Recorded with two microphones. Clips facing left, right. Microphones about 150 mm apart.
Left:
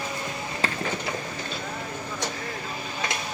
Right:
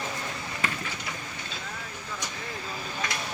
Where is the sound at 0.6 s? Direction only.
45° left (ahead or behind).